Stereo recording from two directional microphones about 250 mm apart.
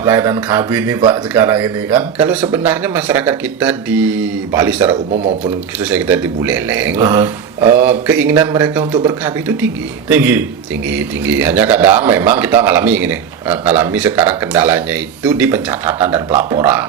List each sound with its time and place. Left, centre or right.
0.0 s a man's voice: centre
5.1 s speech: right
5.8 s a man's voice: centre